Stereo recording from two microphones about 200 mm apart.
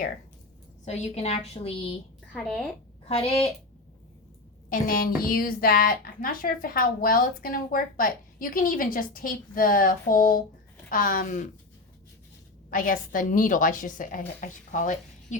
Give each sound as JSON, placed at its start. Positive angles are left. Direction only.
{"t": 0.9, "sound": "a woman's voice", "side_deg": 30}
{"t": 2.3, "sound": "a woman's voice", "side_deg": 0}
{"t": 3.1, "sound": "a woman's voice", "side_deg": 30}
{"t": 4.7, "sound": "a woman's voice", "side_deg": 45}
{"t": 12.7, "sound": "a woman's voice", "side_deg": 45}